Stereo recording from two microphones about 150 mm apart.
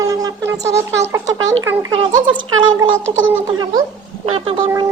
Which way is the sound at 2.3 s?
30° right (ahead or behind).